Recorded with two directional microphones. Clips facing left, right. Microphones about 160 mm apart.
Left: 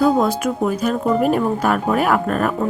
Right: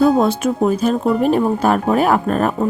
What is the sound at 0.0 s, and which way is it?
Speech, 25° right (ahead or behind).